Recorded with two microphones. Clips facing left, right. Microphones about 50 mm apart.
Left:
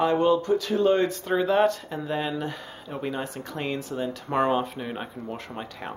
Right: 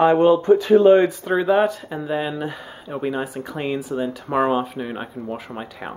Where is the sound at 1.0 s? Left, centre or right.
Centre.